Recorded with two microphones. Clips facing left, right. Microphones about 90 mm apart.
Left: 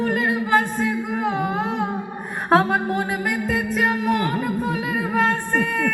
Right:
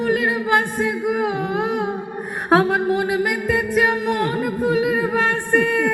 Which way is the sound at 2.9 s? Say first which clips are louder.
Right 4 dB; 15° right (ahead or behind).